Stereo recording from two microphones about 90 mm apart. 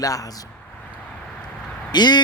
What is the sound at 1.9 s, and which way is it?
Speech, 50° left (ahead or behind).